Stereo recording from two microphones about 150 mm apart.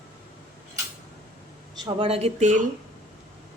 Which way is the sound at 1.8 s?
40° right (ahead or behind).